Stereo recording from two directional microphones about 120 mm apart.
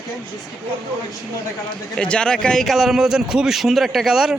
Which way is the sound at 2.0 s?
10° left (ahead or behind).